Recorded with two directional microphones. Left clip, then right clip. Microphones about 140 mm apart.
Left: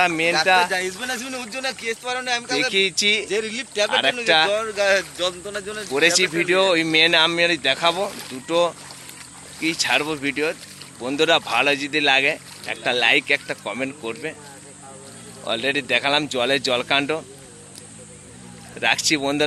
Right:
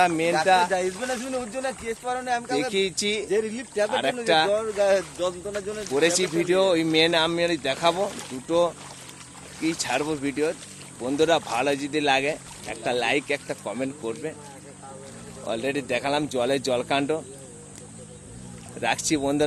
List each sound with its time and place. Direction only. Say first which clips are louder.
0.0 s speech: left 3 dB; centre (ahead or behind)
1.5 s speech: left 3 dB; 55° right (ahead or behind)
2.7 s a man's voice: left 6 dB; 5° left (ahead or behind)
3.2 s speech: left 1 dB; 45° right (ahead or behind)
3.8 s a man's voice: left 5 dB; 5° left (ahead or behind)
4.8 s speech: left 3 dB; 30° right (ahead or behind)
5.5 s a man's voice: left 2 dB; 10° right (ahead or behind)
5.8 s speech: left 5 dB; 10° left (ahead or behind)
15.4 s speech: left 5 dB; 5° left (ahead or behind)
18.8 s speech: left 5 dB; centre (ahead or behind)